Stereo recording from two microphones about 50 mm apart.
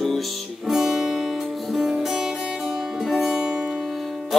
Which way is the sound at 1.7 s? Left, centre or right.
Centre.